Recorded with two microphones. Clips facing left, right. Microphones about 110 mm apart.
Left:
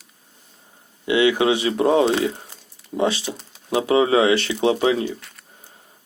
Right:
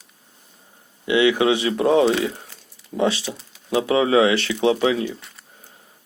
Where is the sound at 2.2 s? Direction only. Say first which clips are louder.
Left 2 dB; 25° left (ahead or behind).